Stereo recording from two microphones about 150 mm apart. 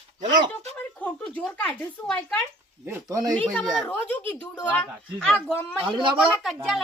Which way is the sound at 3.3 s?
5° left (ahead or behind).